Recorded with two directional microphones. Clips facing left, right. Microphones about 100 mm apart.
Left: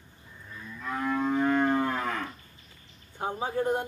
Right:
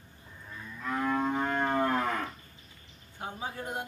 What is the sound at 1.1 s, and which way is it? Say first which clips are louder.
Music: left 5 dB; 35° right (ahead or behind).